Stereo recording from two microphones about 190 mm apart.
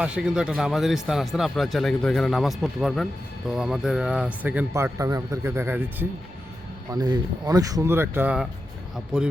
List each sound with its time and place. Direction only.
0.0 s speech: 5° right (ahead or behind)